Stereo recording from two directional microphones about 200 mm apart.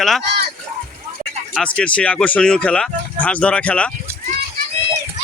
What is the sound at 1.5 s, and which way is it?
A man's voice, 5° left (ahead or behind).